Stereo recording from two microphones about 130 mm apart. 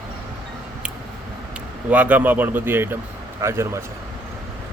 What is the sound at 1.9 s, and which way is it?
Speech, 10° right (ahead or behind).